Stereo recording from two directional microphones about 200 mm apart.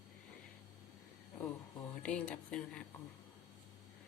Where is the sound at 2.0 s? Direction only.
5° left (ahead or behind).